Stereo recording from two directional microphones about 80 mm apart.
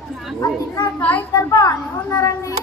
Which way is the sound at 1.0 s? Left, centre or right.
Centre.